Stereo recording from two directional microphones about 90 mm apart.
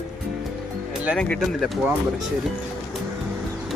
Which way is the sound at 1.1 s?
10° left (ahead or behind).